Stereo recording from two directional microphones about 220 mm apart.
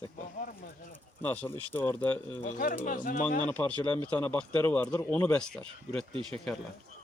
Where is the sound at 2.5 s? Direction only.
40° left (ahead or behind).